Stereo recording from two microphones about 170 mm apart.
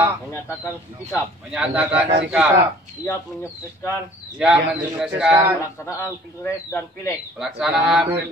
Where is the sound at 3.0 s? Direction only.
15° left (ahead or behind).